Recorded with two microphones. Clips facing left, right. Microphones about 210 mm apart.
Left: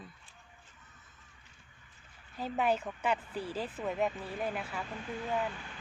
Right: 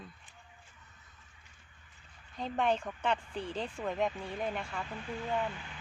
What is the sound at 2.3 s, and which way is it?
Speech, 5° left (ahead or behind).